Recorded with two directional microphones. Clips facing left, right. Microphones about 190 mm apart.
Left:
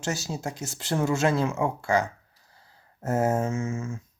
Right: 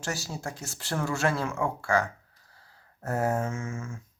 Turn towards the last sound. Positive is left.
turn(degrees=25)  # may be behind; listen again after turning